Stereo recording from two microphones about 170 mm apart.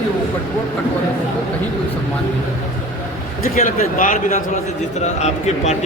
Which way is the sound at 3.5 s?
50° left (ahead or behind).